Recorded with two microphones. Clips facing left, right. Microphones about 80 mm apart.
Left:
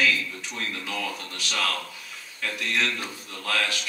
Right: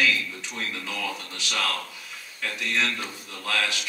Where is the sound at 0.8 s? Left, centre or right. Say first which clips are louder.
Even; centre.